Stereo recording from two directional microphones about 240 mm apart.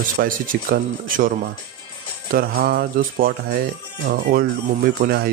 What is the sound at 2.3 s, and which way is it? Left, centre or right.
Speech, right.